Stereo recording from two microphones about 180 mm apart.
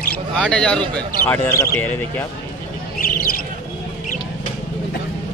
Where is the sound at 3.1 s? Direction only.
55° left (ahead or behind).